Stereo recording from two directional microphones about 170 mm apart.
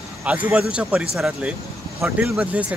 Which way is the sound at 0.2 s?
10° right (ahead or behind).